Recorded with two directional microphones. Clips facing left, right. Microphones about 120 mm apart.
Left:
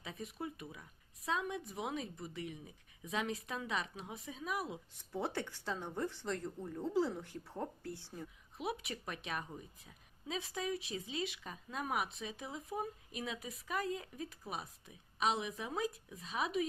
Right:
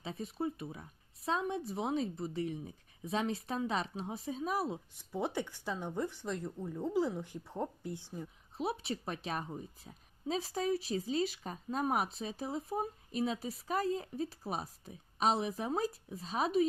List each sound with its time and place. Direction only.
0.0 s a woman's voice: 30° right (ahead or behind)
4.9 s speech: 15° right (ahead or behind)
8.5 s a woman's voice: 30° right (ahead or behind)